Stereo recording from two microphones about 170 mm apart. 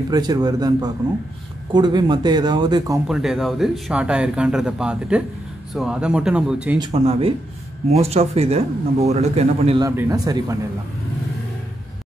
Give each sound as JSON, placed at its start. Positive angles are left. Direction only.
{"t": 0.1, "sound": "speech", "side_deg": -25}
{"t": 3.1, "sound": "speech", "side_deg": 0}
{"t": 6.9, "sound": "speech", "side_deg": -35}
{"t": 9.8, "sound": "speech", "side_deg": -20}